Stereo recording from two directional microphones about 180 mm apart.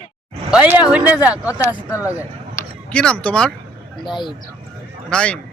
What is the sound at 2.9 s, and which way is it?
Speech, 5° left (ahead or behind).